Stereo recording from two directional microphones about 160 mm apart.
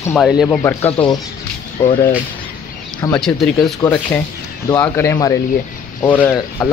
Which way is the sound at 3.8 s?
10° left (ahead or behind).